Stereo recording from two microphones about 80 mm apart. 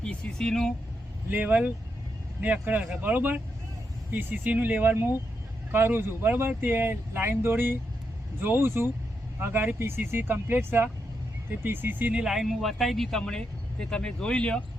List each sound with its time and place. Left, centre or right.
0.0 s speech: centre
1.3 s speech: centre
12.2 s speech: centre